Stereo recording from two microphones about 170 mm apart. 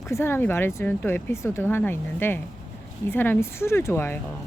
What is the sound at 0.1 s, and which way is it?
Speech, 15° left (ahead or behind).